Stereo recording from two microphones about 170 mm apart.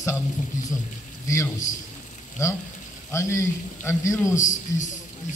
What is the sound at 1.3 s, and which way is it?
Speech, 20° left (ahead or behind).